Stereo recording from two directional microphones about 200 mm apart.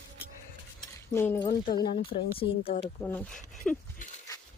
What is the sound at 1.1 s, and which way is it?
Speech, 10° left (ahead or behind).